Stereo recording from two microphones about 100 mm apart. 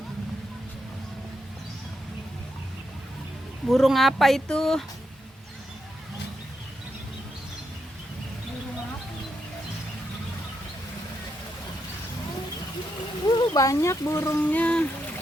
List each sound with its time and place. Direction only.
3.7 s speech: centre (ahead or behind)
13.2 s speech: 45° left (ahead or behind); by 14.3 s 25° left (ahead or behind)
14.3 s speech: 15° left (ahead or behind)